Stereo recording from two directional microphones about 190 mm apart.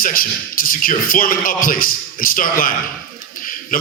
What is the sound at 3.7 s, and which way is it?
Speech, 50° left (ahead or behind).